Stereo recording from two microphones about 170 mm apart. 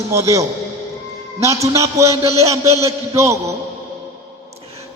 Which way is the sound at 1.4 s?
20° right (ahead or behind).